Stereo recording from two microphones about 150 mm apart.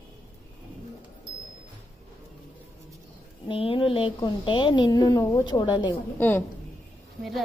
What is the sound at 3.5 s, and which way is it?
A woman's voice, 35° left (ahead or behind).